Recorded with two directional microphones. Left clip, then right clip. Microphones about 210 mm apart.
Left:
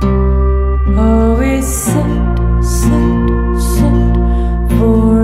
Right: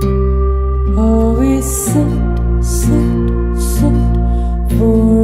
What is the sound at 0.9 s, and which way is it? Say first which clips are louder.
Music: left 1 dB; centre (ahead or behind).